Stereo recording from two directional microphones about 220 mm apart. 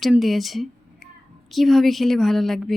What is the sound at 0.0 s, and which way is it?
A woman's voice, centre (ahead or behind).